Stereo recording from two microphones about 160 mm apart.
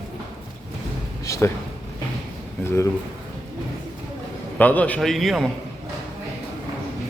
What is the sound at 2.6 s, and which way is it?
Speech, 15° left (ahead or behind).